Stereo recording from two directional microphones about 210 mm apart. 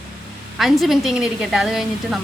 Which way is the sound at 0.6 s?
Centre (ahead or behind).